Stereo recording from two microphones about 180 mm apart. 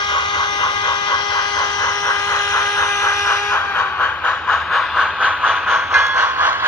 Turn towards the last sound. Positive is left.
turn(degrees=-10)  # may be behind; listen again after turning